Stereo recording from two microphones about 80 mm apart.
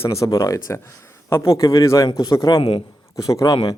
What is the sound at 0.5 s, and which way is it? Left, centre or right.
Speech, left.